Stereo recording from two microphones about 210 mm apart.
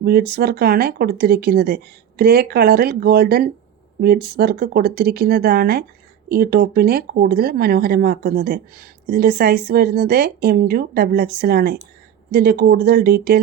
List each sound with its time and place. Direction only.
0.0 s speech: 50° right (ahead or behind)